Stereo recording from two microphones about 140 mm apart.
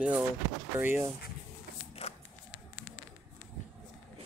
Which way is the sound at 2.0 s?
45° left (ahead or behind).